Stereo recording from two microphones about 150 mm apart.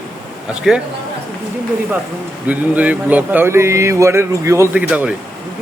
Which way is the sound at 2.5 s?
10° right (ahead or behind).